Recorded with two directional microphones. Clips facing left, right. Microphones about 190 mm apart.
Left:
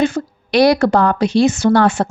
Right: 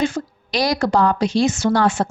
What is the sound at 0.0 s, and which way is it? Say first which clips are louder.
A woman's voice: left 4 dB; 60° left (ahead or behind).